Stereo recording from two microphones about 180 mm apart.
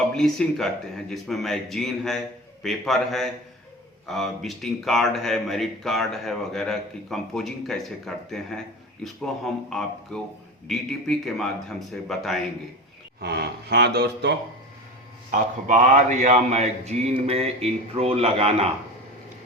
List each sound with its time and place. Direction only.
0.1 s a man's voice: 5° left (ahead or behind)
13.2 s speech: 65° right (ahead or behind)
15.3 s speech: 45° right (ahead or behind)